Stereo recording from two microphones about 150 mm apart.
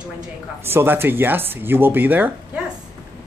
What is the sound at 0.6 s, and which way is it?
Speech, 15° right (ahead or behind).